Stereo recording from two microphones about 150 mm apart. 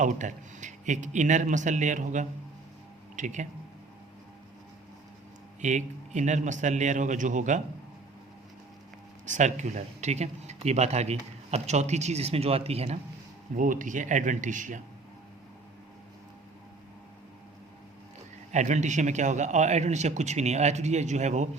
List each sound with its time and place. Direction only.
0.0 s speech: 55° right (ahead or behind)
5.6 s speech: 55° right (ahead or behind)
9.2 s speech: 55° right (ahead or behind)
13.6 s speech: 60° right (ahead or behind)
18.5 s speech: 55° right (ahead or behind)